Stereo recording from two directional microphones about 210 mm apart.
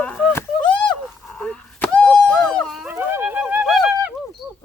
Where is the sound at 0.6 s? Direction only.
20° left (ahead or behind).